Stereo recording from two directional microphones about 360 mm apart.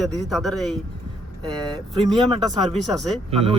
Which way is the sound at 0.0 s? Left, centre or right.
Centre.